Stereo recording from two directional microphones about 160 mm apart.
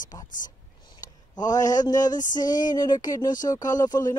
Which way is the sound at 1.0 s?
25° left (ahead or behind).